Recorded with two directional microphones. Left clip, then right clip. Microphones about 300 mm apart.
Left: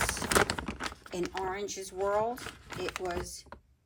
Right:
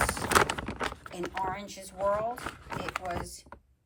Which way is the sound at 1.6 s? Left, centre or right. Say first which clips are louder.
Left 6 dB; centre.